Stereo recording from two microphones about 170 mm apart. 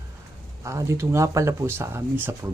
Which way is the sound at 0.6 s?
15° right (ahead or behind).